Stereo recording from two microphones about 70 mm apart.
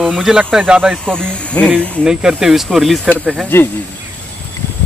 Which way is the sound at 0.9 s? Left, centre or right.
Centre.